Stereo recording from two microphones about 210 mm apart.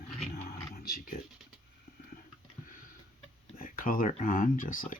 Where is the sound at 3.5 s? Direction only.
40° left (ahead or behind).